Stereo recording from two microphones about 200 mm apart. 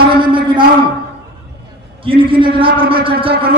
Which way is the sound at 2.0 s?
25° right (ahead or behind).